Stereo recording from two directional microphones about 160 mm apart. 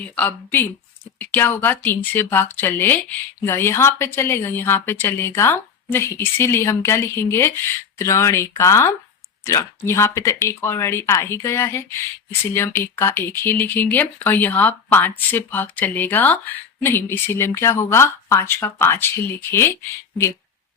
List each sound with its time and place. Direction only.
0.2 s speech: 10° left (ahead or behind)